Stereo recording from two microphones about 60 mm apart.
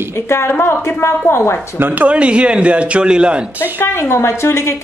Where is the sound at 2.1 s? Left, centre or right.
Centre.